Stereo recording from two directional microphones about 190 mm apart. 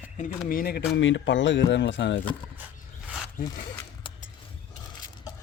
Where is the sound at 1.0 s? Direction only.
75° left (ahead or behind).